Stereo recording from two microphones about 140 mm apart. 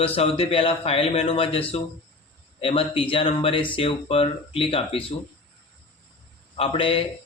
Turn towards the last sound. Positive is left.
turn(degrees=40)  # may be behind; listen again after turning